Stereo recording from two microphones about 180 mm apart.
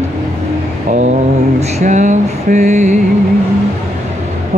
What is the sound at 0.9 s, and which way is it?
Mantra, 40° right (ahead or behind).